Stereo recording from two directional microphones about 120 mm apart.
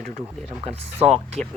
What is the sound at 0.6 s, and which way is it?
Speech, 60° right (ahead or behind).